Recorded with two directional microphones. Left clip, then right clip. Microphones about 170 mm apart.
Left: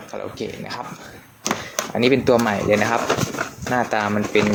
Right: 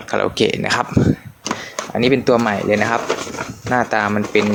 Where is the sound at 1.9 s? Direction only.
10° right (ahead or behind).